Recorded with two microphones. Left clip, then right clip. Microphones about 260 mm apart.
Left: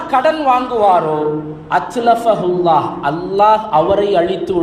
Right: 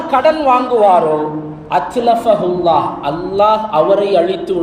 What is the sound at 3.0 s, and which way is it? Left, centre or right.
A man's voice, centre.